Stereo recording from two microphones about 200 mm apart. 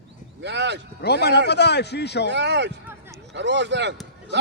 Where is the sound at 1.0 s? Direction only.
55° left (ahead or behind).